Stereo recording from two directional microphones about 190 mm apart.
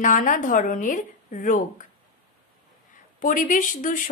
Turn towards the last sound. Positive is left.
turn(degrees=45)  # may be behind; listen again after turning